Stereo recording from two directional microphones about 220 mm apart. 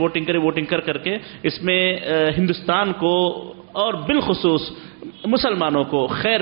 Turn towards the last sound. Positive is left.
turn(degrees=-10)  # may be behind; listen again after turning